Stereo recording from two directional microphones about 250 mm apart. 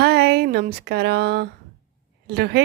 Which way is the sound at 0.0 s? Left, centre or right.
Right.